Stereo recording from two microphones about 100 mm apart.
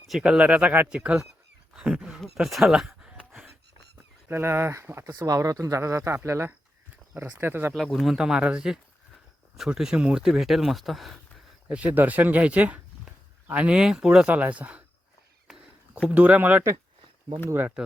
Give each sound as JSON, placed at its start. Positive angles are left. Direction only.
{"t": 0.1, "sound": "speech", "side_deg": -10}
{"t": 4.3, "sound": "speech", "side_deg": -25}
{"t": 7.7, "sound": "speech", "side_deg": 0}
{"t": 11.7, "sound": "speech", "side_deg": -15}
{"t": 15.4, "sound": "a sound", "side_deg": -10}
{"t": 17.8, "sound": "speech", "side_deg": -10}